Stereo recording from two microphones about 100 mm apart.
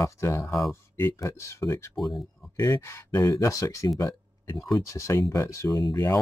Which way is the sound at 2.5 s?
40° left (ahead or behind).